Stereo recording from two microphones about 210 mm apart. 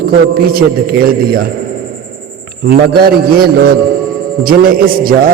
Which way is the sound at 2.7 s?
45° right (ahead or behind).